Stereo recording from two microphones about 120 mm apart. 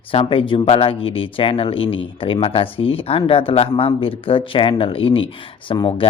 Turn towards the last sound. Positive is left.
turn(degrees=45)  # may be behind; listen again after turning